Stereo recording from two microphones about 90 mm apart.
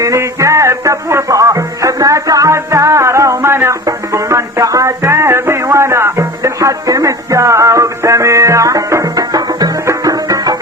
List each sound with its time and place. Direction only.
0.0 s music: 35° right (ahead or behind)